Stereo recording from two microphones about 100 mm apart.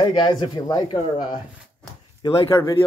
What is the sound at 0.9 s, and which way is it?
Speech, 60° left (ahead or behind).